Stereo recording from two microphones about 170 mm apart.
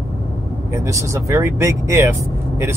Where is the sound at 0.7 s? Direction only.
15° right (ahead or behind).